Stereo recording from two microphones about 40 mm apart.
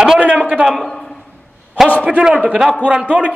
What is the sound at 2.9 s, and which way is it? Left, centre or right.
Speech, right.